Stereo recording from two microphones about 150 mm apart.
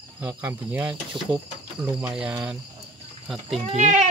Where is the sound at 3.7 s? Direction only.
50° right (ahead or behind).